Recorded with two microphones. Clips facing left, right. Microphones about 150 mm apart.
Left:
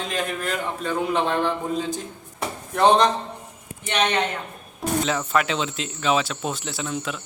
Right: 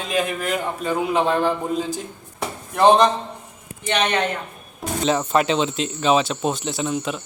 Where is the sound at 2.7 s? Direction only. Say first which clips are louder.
Right 3 dB; 5° right (ahead or behind).